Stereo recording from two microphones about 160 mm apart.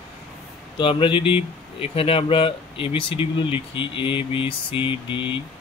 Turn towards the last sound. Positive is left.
turn(degrees=30)  # may be behind; listen again after turning